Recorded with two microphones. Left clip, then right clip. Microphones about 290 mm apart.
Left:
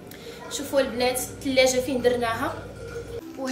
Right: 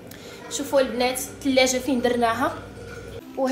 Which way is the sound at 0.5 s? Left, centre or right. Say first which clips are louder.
Right 3 dB; centre.